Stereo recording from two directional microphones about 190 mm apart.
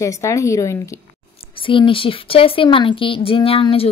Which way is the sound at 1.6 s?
25° left (ahead or behind).